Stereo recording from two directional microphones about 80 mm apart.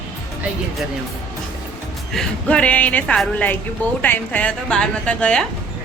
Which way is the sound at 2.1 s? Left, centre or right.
Centre.